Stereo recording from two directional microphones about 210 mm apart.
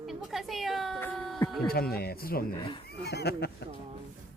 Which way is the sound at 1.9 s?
45° left (ahead or behind).